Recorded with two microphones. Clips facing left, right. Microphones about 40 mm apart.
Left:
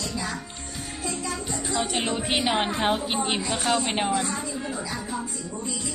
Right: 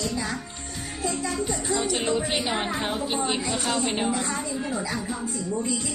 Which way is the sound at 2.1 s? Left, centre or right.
Left.